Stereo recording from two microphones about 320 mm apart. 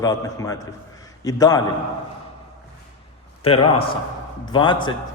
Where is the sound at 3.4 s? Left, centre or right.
Centre.